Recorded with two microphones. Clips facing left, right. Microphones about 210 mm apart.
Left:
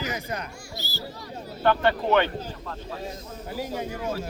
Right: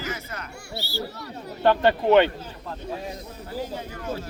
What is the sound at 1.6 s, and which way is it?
Speech, 20° right (ahead or behind).